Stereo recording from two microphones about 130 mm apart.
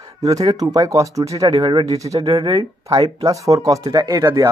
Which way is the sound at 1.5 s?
40° right (ahead or behind).